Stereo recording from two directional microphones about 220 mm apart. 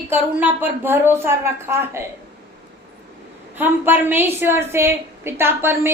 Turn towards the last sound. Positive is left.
turn(degrees=-10)  # may be behind; listen again after turning